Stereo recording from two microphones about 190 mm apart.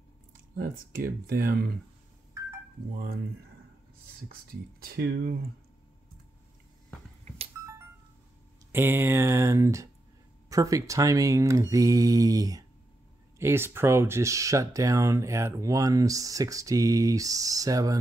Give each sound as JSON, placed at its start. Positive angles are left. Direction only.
{"t": 0.6, "sound": "speech", "side_deg": -50}
{"t": 4.3, "sound": "speech", "side_deg": -50}
{"t": 8.7, "sound": "speech", "side_deg": -10}